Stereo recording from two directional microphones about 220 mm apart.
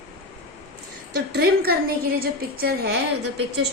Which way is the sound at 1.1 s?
45° right (ahead or behind).